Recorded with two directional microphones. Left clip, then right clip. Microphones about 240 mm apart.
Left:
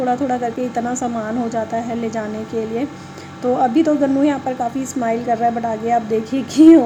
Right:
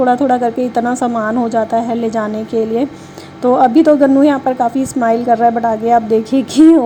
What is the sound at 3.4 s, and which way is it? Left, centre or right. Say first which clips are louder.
A woman's voice: right 6 dB; right.